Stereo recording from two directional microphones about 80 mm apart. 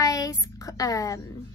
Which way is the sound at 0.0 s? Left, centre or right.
Left.